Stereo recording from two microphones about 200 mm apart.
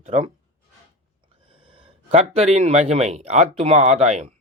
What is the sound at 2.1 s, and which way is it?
Speech, 30° right (ahead or behind).